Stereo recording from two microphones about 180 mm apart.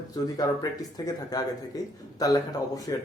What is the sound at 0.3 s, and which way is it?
A man's voice, 20° left (ahead or behind).